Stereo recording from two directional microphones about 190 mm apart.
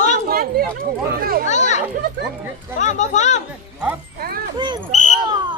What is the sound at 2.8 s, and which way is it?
Speech, 40° left (ahead or behind).